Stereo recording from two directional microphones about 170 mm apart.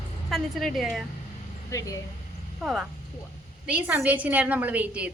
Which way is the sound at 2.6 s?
5° right (ahead or behind).